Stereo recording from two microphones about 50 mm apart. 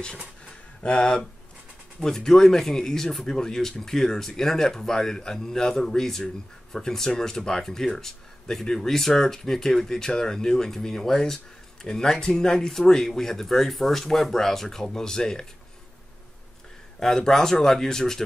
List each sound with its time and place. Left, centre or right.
0.5 s a sound: centre
2.0 s a man's voice: centre
17.0 s a man's voice: centre